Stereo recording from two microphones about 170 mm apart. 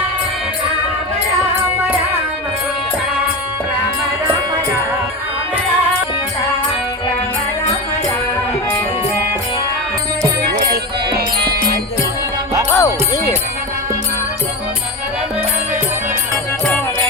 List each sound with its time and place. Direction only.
10.5 s music: 65° right (ahead or behind)
12.7 s music: 15° left (ahead or behind)